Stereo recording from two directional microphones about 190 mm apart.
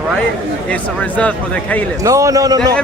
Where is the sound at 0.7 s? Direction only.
5° left (ahead or behind).